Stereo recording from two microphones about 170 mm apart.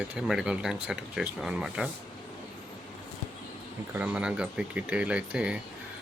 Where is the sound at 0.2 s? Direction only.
5° right (ahead or behind).